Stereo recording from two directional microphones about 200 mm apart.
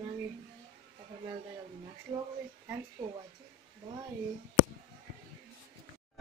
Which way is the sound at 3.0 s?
25° right (ahead or behind).